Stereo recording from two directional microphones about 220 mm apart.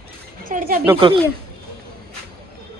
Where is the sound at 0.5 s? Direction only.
40° right (ahead or behind).